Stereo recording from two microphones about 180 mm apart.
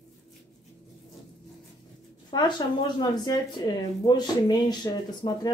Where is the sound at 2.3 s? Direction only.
25° left (ahead or behind).